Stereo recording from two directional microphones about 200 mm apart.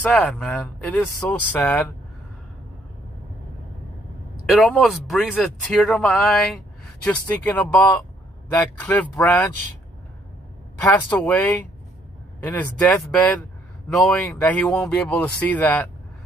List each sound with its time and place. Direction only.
0.0 s a man's voice: 5° left (ahead or behind)
4.6 s a man's voice: centre (ahead or behind)
10.8 s a man's voice: 10° left (ahead or behind)